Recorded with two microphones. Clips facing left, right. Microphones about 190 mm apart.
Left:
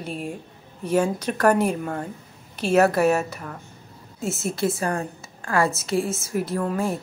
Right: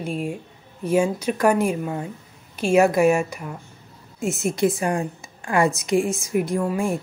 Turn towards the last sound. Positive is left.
turn(degrees=-10)  # may be behind; listen again after turning